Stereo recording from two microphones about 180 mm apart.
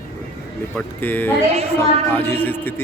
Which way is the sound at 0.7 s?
10° left (ahead or behind).